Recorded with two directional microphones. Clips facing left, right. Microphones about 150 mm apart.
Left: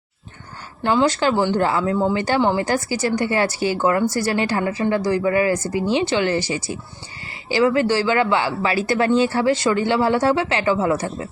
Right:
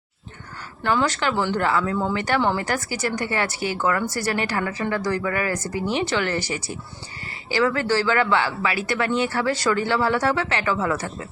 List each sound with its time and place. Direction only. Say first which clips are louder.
0.8 s a woman's voice: left 4 dB; 25° left (ahead or behind)
2.6 s a woman's voice: left 5 dB; 30° left (ahead or behind)